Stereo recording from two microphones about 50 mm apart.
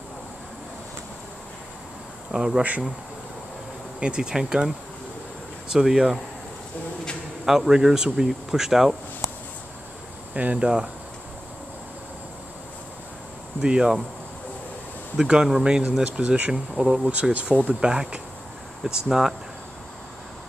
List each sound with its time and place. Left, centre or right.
2.3 s speech: centre
4.0 s speech: centre
7.4 s speech: centre
10.3 s speech: right
13.6 s speech: centre
15.1 s speech: centre
15.9 s speech: right
16.5 s speech: centre
17.0 s speech: right